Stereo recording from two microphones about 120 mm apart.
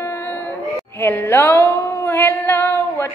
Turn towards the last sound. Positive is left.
turn(degrees=20)  # may be behind; listen again after turning